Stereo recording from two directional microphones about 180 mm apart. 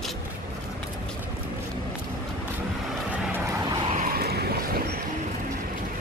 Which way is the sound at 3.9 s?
50° right (ahead or behind).